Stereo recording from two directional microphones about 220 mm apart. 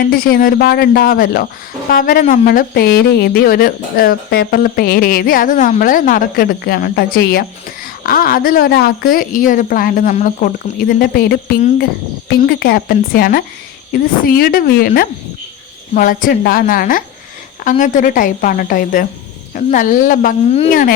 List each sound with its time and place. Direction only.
0.1 s speech: 40° left (ahead or behind)